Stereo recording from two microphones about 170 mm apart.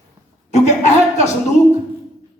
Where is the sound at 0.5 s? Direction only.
45° left (ahead or behind).